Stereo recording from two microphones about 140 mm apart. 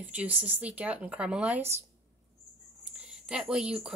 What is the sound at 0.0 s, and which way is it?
Speech, 10° right (ahead or behind).